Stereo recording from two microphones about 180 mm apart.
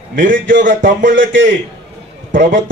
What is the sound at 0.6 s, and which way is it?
Speech, 45° right (ahead or behind).